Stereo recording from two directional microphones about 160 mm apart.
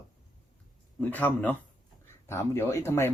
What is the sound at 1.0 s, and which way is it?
Speech, 10° left (ahead or behind).